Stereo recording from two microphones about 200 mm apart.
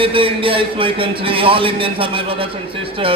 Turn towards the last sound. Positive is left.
turn(degrees=-25)  # may be behind; listen again after turning